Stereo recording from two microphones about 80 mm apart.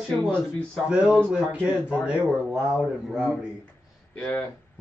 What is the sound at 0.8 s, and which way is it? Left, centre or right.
Speech, centre.